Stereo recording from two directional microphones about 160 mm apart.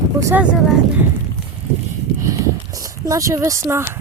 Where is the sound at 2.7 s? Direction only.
20° right (ahead or behind).